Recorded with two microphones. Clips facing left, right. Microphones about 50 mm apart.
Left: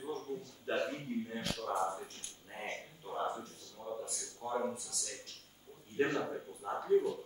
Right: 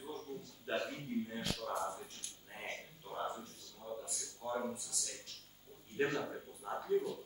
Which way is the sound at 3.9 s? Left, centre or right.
Centre.